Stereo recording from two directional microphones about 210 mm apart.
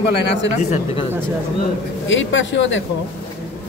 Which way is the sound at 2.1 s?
65° left (ahead or behind).